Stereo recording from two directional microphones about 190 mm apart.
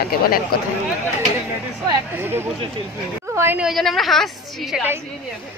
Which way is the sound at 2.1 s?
10° right (ahead or behind).